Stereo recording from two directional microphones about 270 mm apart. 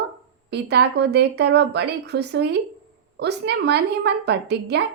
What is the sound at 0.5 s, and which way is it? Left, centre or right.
A woman's voice, right.